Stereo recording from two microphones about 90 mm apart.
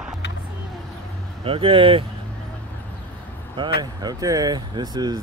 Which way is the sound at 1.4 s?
85° right.